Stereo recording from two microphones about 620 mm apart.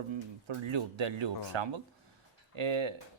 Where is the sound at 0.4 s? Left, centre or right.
Right.